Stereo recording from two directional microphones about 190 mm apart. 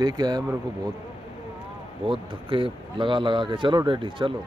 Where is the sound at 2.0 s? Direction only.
25° right (ahead or behind).